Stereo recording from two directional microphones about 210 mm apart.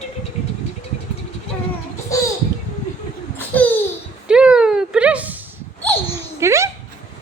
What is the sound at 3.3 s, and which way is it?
Babbling, 5° left (ahead or behind).